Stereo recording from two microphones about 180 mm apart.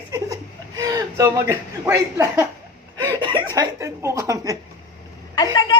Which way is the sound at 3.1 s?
25° right (ahead or behind).